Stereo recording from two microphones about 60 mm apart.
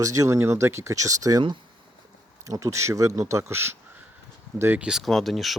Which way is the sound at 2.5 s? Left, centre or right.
Right.